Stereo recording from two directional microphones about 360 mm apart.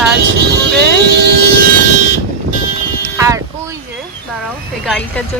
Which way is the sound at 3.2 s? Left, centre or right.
Centre.